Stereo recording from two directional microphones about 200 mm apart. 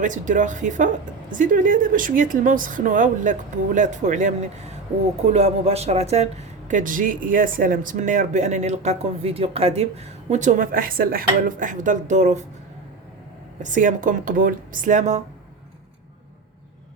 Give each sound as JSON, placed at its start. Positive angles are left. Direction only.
{"t": 0.0, "sound": "speech", "side_deg": -40}
{"t": 13.6, "sound": "speech", "side_deg": -40}